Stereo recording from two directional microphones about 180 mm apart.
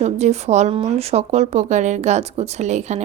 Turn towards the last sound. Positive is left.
turn(degrees=-40)  # may be behind; listen again after turning